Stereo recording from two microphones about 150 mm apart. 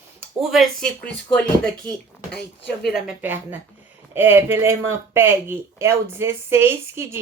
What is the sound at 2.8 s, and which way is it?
Speech, centre (ahead or behind).